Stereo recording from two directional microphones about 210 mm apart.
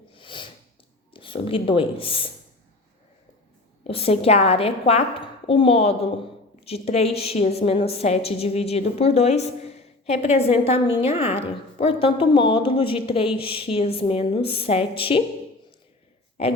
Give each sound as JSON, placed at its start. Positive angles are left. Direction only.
{"t": 0.1, "sound": "a sound", "side_deg": 25}
{"t": 1.1, "sound": "speech", "side_deg": 25}
{"t": 3.8, "sound": "a woman's voice", "side_deg": 30}